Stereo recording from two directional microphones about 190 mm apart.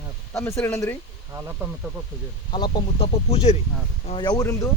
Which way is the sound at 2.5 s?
25° left (ahead or behind).